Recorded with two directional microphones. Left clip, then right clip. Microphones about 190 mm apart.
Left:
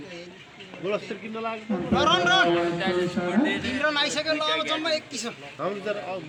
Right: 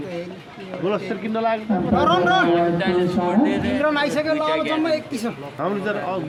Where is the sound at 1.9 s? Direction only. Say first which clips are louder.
Right 3 dB; 55° right (ahead or behind).